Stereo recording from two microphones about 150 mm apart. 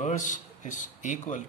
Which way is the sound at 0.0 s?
55° left (ahead or behind).